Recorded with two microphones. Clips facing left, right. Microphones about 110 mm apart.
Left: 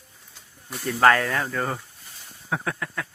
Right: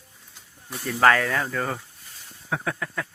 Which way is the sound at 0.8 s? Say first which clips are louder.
Left 1 dB; 5° left (ahead or behind).